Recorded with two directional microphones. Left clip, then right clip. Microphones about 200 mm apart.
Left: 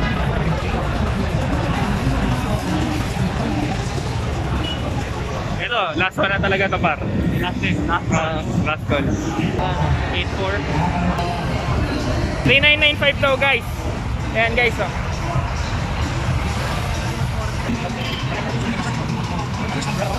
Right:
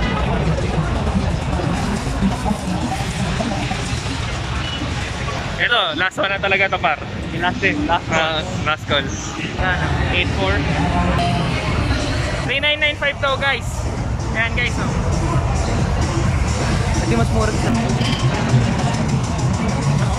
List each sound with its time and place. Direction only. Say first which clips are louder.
5.6 s speech: right 3 dB; 5° left (ahead or behind)
7.4 s speech: right 8 dB; 30° right (ahead or behind)
12.4 s speech: left 4 dB; centre (ahead or behind)
14.3 s speech: left 3 dB; 20° left (ahead or behind)